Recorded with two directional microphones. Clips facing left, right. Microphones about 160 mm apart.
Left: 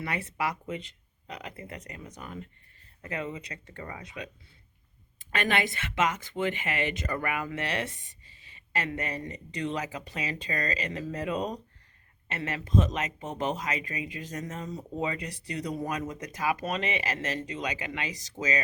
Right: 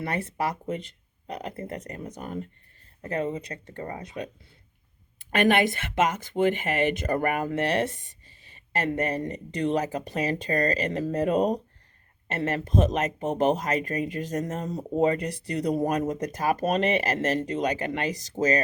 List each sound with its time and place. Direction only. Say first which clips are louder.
0.0 s speech: right 3 dB; 45° right (ahead or behind)
5.2 s speech: right 7 dB; 55° right (ahead or behind)